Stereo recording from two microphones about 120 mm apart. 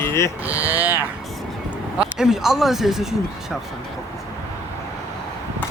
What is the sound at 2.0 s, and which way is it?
Speech, 5° right (ahead or behind).